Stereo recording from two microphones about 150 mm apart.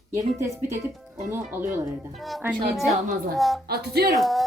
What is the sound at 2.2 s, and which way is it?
A woman's voice, centre (ahead or behind).